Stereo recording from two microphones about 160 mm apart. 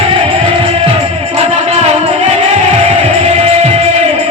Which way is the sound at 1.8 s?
40° right (ahead or behind).